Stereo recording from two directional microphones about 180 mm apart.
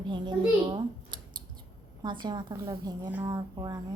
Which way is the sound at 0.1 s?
25° right (ahead or behind).